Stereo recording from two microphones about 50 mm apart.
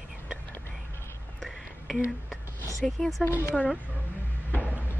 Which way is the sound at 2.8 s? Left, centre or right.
Centre.